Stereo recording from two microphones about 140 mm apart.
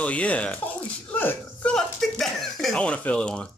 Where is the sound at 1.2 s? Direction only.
10° left (ahead or behind).